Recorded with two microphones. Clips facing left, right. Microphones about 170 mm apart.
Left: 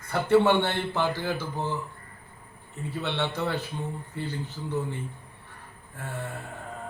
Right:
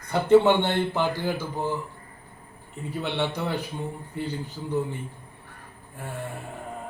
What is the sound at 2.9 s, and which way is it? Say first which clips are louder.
Speech: right 2 dB; 15° right (ahead or behind).